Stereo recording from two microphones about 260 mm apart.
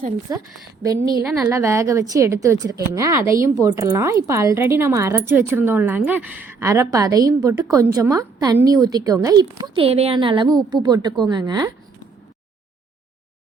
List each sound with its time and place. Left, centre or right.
0.3 s a woman's voice: centre